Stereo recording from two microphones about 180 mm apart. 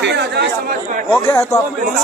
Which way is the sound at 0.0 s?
70° right (ahead or behind).